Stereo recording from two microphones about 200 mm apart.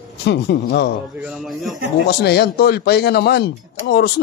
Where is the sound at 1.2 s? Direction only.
5° right (ahead or behind).